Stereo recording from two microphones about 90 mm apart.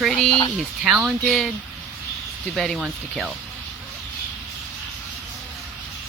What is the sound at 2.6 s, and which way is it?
Speech, centre (ahead or behind).